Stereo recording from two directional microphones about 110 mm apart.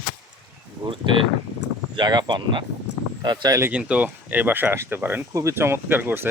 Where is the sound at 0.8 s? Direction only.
50° right (ahead or behind).